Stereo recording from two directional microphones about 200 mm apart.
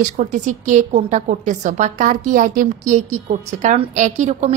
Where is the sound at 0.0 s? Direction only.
40° right (ahead or behind).